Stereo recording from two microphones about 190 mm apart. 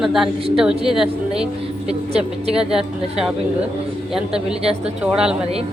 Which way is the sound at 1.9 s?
35° right (ahead or behind).